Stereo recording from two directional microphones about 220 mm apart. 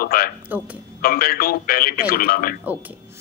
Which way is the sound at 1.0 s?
40° left (ahead or behind).